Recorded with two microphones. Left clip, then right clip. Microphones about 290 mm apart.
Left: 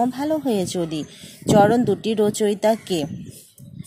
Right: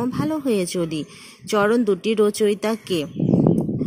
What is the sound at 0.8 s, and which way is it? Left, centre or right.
Speech, left.